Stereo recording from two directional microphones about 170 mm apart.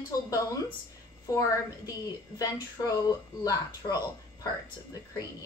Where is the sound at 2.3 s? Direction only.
30° left (ahead or behind).